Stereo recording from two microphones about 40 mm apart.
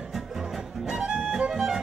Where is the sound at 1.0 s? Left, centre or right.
Centre.